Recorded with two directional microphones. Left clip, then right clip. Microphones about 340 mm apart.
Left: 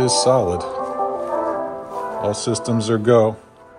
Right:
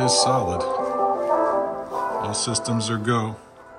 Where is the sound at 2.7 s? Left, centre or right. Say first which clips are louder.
Left 12 dB; centre.